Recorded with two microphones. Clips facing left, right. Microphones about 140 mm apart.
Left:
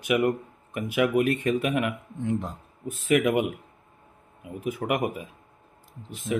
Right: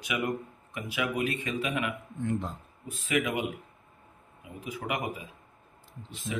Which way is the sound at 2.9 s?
55° left (ahead or behind).